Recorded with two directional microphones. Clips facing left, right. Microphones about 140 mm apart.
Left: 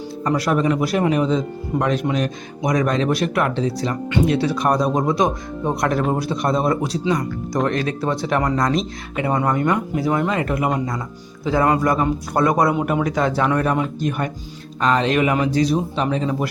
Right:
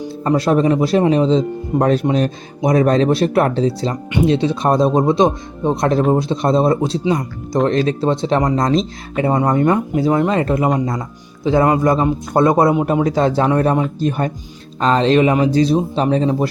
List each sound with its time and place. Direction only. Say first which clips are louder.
0.3 s speech: right 4 dB; 25° right (ahead or behind)